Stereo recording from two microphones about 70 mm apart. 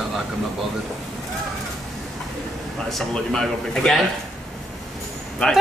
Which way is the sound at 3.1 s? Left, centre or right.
Centre.